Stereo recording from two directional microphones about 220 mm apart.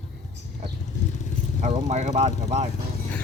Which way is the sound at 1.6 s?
30° right (ahead or behind).